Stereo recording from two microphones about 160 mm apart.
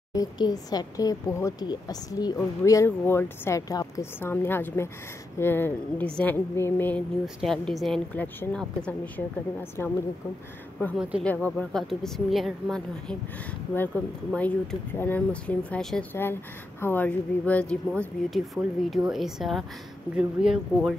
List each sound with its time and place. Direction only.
0.1 s speech: 25° left (ahead or behind)
7.3 s speech: centre (ahead or behind)
11.0 s speech: 5° right (ahead or behind)
11.2 s speech: 10° left (ahead or behind)